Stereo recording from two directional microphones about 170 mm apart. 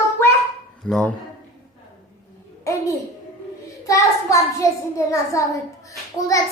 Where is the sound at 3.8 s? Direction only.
20° left (ahead or behind).